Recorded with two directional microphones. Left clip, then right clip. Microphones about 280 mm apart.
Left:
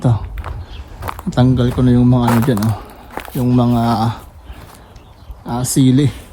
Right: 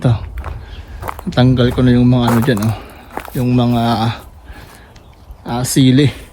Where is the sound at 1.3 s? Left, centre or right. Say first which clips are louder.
Right 3 dB; centre.